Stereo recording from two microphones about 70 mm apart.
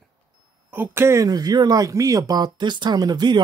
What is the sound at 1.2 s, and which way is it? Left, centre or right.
Speech, right.